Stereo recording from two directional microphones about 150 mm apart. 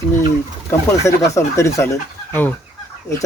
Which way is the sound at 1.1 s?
20° left (ahead or behind).